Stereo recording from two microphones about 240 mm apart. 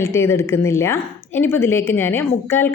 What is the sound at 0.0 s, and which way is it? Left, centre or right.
A woman's voice, centre.